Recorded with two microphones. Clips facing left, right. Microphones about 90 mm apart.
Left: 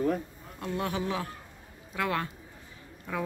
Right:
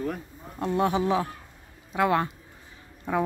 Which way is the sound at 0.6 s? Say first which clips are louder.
Right 7 dB; 25° right (ahead or behind).